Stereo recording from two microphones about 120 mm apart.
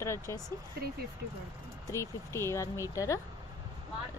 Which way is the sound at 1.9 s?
25° left (ahead or behind).